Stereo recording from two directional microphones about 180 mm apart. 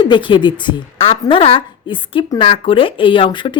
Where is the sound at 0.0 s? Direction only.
25° left (ahead or behind).